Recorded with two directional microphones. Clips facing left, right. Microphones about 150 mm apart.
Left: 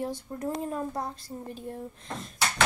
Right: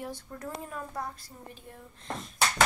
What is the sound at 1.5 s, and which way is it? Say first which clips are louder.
Speech: left 11 dB; 40° left (ahead or behind).